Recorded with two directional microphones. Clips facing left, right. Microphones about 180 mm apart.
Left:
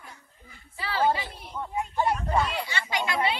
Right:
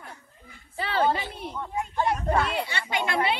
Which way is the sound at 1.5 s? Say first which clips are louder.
Left 1 dB; 10° left (ahead or behind).